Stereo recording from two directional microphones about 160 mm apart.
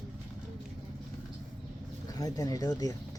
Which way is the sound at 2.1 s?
25° left (ahead or behind).